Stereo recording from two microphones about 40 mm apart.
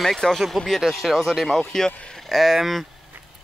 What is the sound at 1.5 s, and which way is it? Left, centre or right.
Speech, centre.